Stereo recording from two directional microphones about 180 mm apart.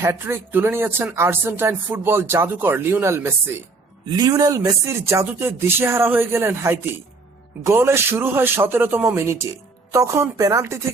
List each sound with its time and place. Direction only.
0.0 s speech: 15° right (ahead or behind)